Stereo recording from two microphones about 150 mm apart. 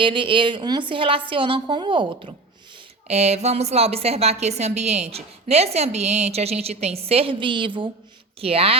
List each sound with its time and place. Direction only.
0.0 s a woman's voice: 35° right (ahead or behind)
3.1 s a woman's voice: 45° right (ahead or behind)